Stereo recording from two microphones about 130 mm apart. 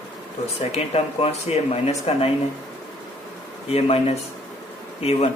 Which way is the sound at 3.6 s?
50° left (ahead or behind).